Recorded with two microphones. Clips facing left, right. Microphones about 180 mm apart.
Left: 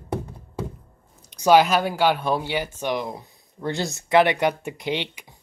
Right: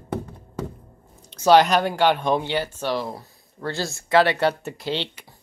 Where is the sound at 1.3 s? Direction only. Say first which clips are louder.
Right 1 dB; 15° left (ahead or behind).